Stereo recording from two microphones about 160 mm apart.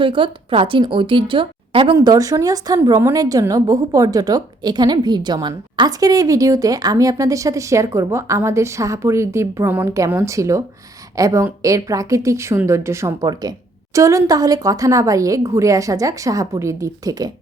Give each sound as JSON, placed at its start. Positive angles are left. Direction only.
{"t": 0.0, "sound": "a woman's voice", "side_deg": -30}
{"t": 2.0, "sound": "a woman's voice", "side_deg": -20}